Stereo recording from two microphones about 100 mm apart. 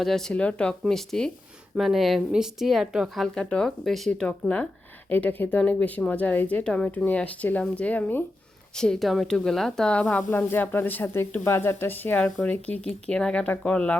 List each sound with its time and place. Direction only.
0.0 s speech: 5° left (ahead or behind)
3.3 s speech: 5° left (ahead or behind)
4.1 s a woman's voice: 10° left (ahead or behind)